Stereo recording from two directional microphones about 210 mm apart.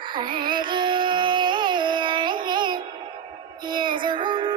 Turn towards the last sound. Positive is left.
turn(degrees=-20)  # may be behind; listen again after turning